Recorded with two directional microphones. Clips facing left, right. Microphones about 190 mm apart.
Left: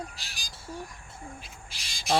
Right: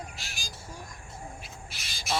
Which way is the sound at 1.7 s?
30° left (ahead or behind).